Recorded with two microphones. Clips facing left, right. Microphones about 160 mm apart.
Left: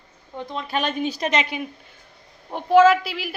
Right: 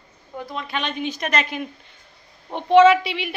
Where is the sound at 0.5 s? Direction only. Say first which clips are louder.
Left 3 dB; 40° left (ahead or behind).